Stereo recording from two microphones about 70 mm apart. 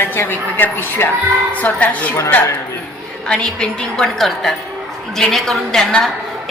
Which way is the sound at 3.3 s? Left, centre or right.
Centre.